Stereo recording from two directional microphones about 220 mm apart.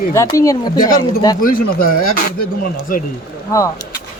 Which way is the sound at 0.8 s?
40° left (ahead or behind).